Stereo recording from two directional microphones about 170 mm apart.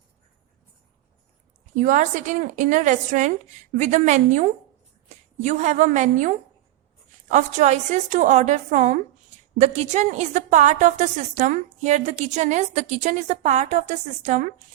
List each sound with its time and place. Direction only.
1.7 s a woman's voice: 45° right (ahead or behind)